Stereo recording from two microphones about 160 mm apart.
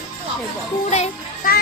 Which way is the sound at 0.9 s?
45° left (ahead or behind).